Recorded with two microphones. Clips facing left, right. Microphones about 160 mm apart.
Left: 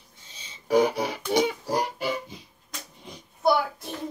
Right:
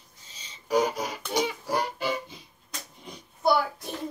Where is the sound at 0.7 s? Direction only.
65° left (ahead or behind).